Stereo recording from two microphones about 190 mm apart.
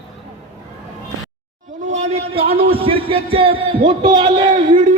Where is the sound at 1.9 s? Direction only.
35° right (ahead or behind).